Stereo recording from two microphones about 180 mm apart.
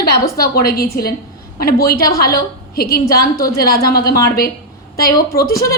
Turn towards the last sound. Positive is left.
turn(degrees=55)  # may be behind; listen again after turning